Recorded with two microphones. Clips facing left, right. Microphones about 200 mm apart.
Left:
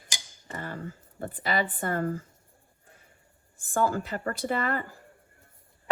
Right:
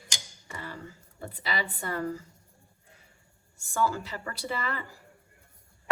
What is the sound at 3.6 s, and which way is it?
A woman's voice, 50° left (ahead or behind).